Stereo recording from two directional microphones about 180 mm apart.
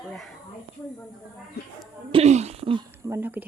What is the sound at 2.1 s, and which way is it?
Speech, 40° right (ahead or behind).